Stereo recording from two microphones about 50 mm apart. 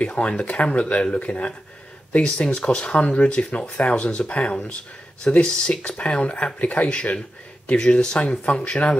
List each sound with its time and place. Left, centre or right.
0.0 s speech: left